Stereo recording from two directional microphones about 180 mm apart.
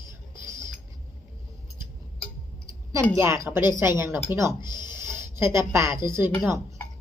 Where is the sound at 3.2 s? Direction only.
15° right (ahead or behind).